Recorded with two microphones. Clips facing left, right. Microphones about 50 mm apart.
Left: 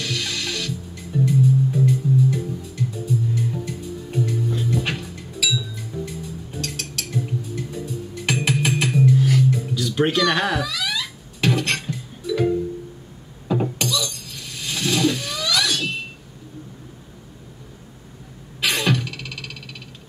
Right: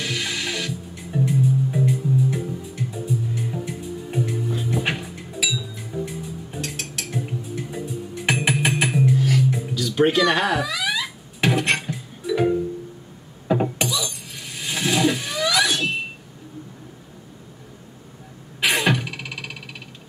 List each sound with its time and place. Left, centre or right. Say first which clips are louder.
0.0 s music: right 1 dB; centre
9.2 s music: left 1 dB; centre
9.8 s speech: right 3 dB; centre
10.7 s music: right 2 dB; centre
13.5 s glass: right 1 dB; centre
18.6 s music: right 1 dB; centre